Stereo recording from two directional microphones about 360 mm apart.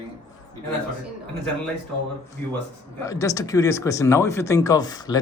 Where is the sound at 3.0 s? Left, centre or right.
Centre.